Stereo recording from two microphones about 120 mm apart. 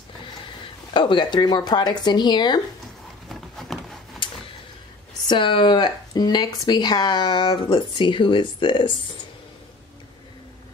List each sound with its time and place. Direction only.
0.9 s speech: 40° left (ahead or behind)
3.3 s a sound: centre (ahead or behind)
5.3 s speech: 45° left (ahead or behind)